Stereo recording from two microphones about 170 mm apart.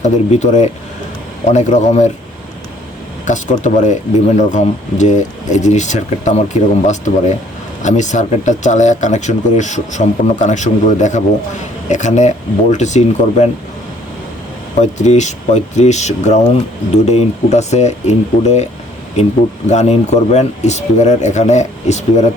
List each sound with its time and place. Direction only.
0.0 s speech: 45° left (ahead or behind)
3.2 s speech: 45° left (ahead or behind)
14.8 s speech: 45° left (ahead or behind)